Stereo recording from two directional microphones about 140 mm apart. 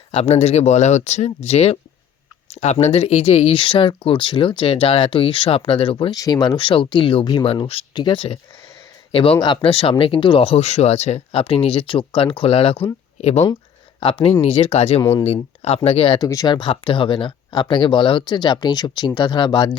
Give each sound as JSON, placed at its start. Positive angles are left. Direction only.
{"t": 0.1, "sound": "speech", "side_deg": 45}
{"t": 6.1, "sound": "speech", "side_deg": 25}
{"t": 16.1, "sound": "speech", "side_deg": 25}